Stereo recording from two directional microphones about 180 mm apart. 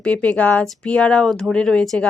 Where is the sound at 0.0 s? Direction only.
5° left (ahead or behind).